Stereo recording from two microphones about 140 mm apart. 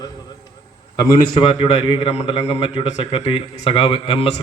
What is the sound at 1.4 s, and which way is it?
A man's voice, 40° left (ahead or behind).